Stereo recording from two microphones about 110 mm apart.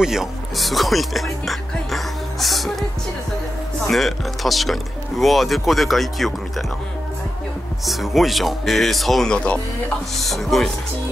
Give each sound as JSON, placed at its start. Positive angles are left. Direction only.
{"t": 0.0, "sound": "speech", "side_deg": -5}
{"t": 3.8, "sound": "speech", "side_deg": 0}
{"t": 7.8, "sound": "speech", "side_deg": 0}